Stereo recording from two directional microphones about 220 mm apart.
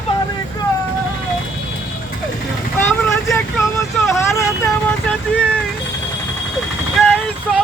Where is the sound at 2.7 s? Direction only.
10° left (ahead or behind).